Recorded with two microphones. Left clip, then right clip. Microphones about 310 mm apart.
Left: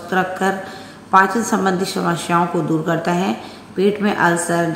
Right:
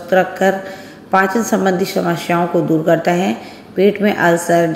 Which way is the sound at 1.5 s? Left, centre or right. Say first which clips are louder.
Right 3 dB; centre.